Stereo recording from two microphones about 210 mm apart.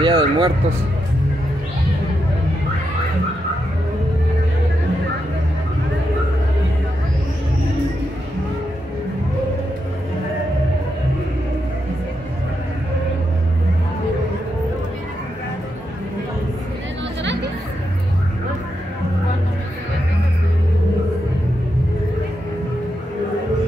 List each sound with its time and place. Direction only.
0.0 s speech: 25° right (ahead or behind)
17.2 s chatter: 55° right (ahead or behind)